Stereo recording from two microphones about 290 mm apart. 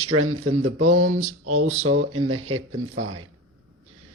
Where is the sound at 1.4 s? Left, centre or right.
Right.